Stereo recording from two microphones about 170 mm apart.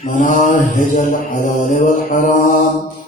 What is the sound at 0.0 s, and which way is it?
Mantra, 50° left (ahead or behind).